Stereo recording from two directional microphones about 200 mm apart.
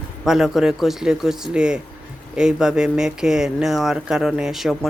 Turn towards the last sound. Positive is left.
turn(degrees=0)  # may be behind; listen again after turning